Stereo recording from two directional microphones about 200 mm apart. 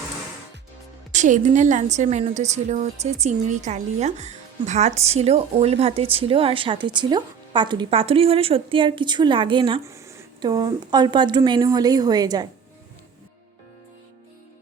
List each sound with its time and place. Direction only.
1.1 s a woman's voice: 35° right (ahead or behind)
9.8 s a woman's voice: 15° right (ahead or behind)